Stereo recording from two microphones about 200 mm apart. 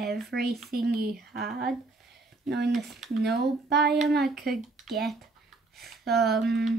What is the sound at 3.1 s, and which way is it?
Speech, 55° right (ahead or behind).